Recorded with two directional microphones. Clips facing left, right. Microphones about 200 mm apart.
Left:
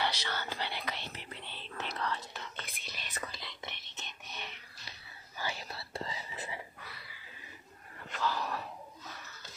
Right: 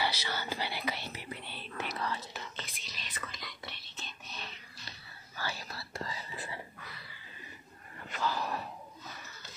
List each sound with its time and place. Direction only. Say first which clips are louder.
0.0 s speech: right 1 dB; 5° right (ahead or behind)
2.0 s whispering: even; 5° right (ahead or behind)
2.8 s whispering: left 2 dB; 50° left (ahead or behind)
3.3 s whispering: even; 25° left (ahead or behind)
8.1 s dog: even; centre (ahead or behind)